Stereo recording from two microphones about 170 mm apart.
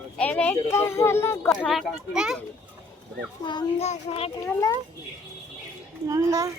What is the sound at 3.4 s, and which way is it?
Speech, 25° left (ahead or behind).